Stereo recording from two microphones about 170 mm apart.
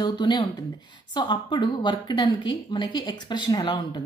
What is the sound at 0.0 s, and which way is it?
A woman's voice, 25° left (ahead or behind).